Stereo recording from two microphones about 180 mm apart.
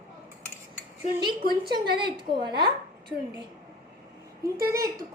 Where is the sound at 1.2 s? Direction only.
25° right (ahead or behind).